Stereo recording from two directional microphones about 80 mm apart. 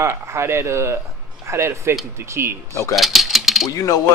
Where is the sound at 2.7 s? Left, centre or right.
Left.